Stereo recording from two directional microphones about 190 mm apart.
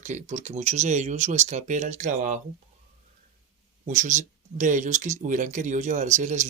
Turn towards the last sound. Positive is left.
turn(degrees=-40)  # may be behind; listen again after turning